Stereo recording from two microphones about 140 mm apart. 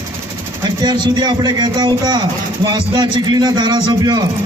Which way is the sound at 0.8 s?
30° right (ahead or behind).